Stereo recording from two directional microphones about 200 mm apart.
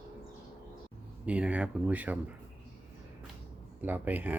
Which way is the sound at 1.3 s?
5° right (ahead or behind).